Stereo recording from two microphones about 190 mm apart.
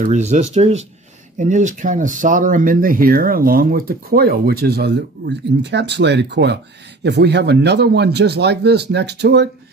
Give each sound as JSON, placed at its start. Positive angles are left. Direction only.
{"t": 0.0, "sound": "speech", "side_deg": -40}